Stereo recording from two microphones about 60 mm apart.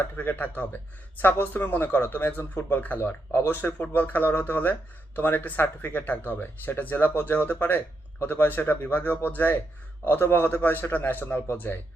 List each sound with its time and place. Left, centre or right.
0.2 s speech: left